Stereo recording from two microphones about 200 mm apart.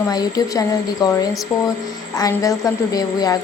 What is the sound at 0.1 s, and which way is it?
A woman's voice, 20° left (ahead or behind).